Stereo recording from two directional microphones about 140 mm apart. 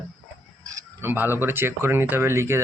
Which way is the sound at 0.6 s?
25° right (ahead or behind).